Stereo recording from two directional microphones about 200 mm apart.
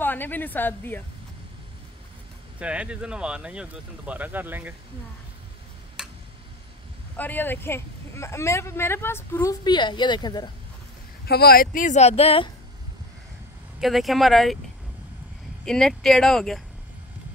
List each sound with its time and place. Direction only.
0.0 s speech: 10° left (ahead or behind)
2.6 s speech: 5° right (ahead or behind)
6.0 s tick: centre (ahead or behind)
7.2 s speech: 10° left (ahead or behind)
11.2 s speech: 50° left (ahead or behind); by 12.4 s 30° left (ahead or behind)
13.7 s speech: centre (ahead or behind)
15.6 s speech: 5° left (ahead or behind)